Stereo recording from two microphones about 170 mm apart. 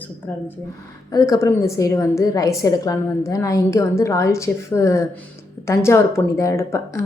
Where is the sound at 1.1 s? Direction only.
20° left (ahead or behind).